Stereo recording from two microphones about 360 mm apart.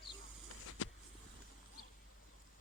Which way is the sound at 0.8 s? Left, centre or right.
Left.